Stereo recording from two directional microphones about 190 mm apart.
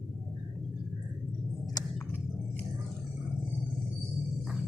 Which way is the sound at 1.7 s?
20° left (ahead or behind).